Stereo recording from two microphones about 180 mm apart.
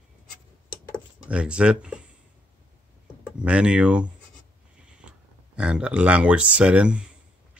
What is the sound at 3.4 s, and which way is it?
Speech, 5° right (ahead or behind).